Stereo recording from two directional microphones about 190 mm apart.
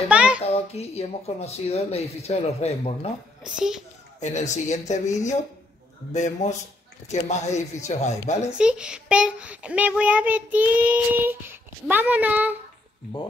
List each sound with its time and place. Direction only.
0.1 s a sound: 5° right (ahead or behind)
0.5 s speech: 35° left (ahead or behind)
3.5 s a child's voice: 5° right (ahead or behind)
4.2 s speech: 40° left (ahead or behind)
6.1 s speech: 40° left (ahead or behind)
8.5 s a child's voice: 5° right (ahead or behind)